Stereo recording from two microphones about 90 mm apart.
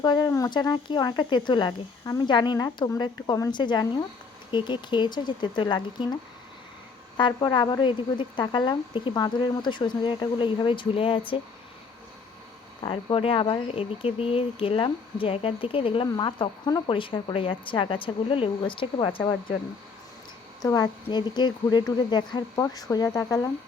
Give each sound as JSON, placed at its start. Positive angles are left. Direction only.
{"t": 0.0, "sound": "a woman's voice", "side_deg": 55}
{"t": 0.3, "sound": "speech", "side_deg": 40}
{"t": 0.5, "sound": "a woman's voice", "side_deg": 55}
{"t": 7.2, "sound": "a woman's voice", "side_deg": 55}
{"t": 12.8, "sound": "speech", "side_deg": 65}
{"t": 16.1, "sound": "a woman's voice", "side_deg": 55}
{"t": 16.8, "sound": "a woman's voice", "side_deg": 75}
{"t": 20.6, "sound": "a woman's voice", "side_deg": 45}
{"t": 22.6, "sound": "a woman's voice", "side_deg": 40}